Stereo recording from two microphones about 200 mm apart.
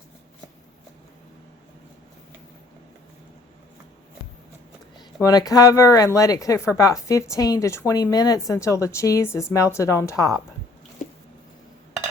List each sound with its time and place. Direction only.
5.2 s a woman's voice: 20° left (ahead or behind)